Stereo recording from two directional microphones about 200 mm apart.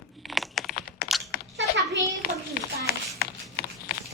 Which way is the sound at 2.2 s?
50° left (ahead or behind).